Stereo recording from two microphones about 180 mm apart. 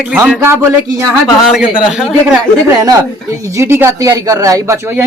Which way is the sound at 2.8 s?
20° right (ahead or behind).